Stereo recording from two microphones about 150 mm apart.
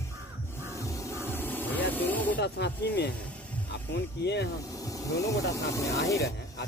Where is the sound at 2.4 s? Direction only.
90° left.